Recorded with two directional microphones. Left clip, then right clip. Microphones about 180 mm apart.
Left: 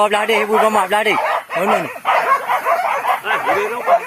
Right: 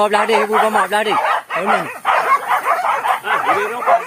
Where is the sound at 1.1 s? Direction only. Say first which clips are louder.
Right 1 dB; 15° right (ahead or behind).